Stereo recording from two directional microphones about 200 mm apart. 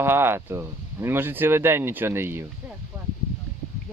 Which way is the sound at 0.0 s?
10° right (ahead or behind).